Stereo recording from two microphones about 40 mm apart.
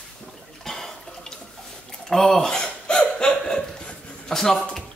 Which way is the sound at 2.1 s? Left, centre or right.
Centre.